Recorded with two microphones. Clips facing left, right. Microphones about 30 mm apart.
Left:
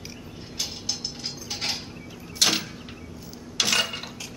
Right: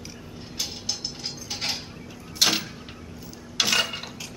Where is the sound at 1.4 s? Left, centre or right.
Centre.